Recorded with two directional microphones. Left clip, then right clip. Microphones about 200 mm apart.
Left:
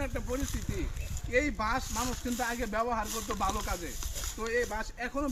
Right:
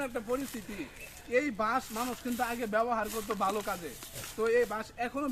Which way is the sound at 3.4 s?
Centre (ahead or behind).